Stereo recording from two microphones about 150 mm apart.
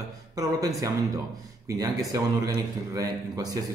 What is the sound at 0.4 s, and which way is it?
A man's voice, 25° right (ahead or behind).